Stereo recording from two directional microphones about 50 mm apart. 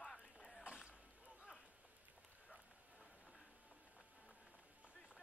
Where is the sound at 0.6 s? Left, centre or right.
Right.